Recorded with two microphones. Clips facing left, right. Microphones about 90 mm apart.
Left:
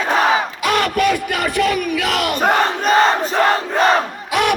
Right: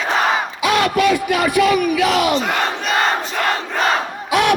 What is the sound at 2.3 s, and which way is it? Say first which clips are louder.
Crowd: left 3 dB; 45° left (ahead or behind).